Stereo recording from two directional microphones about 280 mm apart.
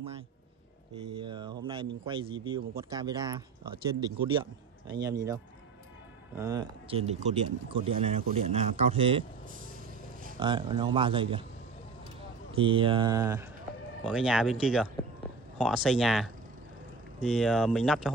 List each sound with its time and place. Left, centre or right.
1.2 s speech: centre
6.3 s speech: centre
10.4 s speech: centre
12.5 s speech: centre